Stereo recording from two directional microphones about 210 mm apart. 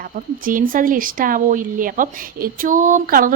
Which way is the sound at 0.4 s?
40° right (ahead or behind).